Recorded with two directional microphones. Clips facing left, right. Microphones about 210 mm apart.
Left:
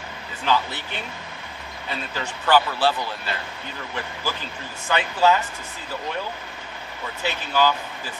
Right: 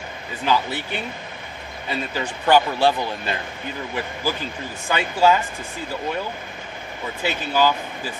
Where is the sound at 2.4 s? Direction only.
15° right (ahead or behind).